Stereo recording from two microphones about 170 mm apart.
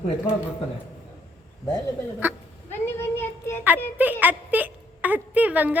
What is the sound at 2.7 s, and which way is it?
Child singing, 15° left (ahead or behind).